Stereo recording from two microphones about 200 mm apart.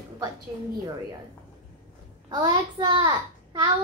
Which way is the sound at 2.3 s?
20° right (ahead or behind).